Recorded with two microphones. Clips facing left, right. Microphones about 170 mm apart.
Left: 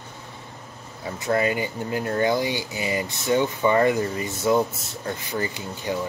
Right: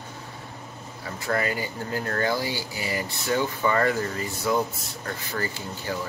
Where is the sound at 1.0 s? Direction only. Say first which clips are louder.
Left 4 dB; 20° left (ahead or behind).